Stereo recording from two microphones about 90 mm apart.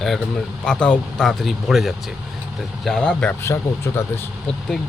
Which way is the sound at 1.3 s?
Centre (ahead or behind).